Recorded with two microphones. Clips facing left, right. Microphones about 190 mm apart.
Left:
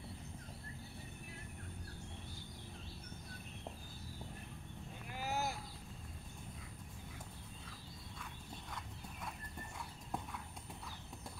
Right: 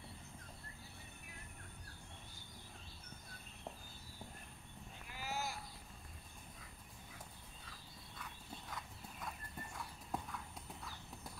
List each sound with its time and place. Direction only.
5.1 s vehicle: 50° left (ahead or behind)
8.6 s clip-clop: centre (ahead or behind)